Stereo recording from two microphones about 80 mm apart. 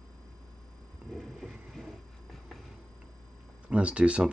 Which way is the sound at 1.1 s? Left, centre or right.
Centre.